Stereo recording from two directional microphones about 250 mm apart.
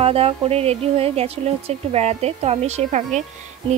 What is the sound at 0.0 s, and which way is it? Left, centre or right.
Speech, right.